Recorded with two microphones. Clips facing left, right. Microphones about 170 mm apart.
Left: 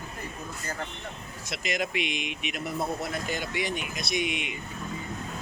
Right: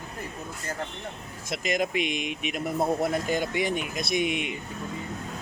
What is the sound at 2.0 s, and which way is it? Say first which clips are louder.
Speech: right 3 dB; 45° right (ahead or behind).